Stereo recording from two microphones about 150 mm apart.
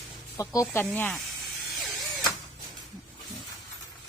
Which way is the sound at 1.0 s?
5° left (ahead or behind).